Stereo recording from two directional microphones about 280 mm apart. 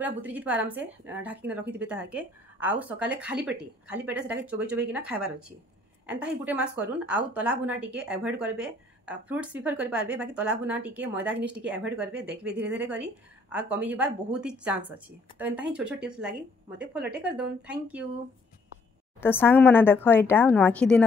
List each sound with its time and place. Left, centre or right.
0.0 s a woman's voice: centre
17.0 s speech: right
17.4 s a woman's voice: centre
19.2 s speech: centre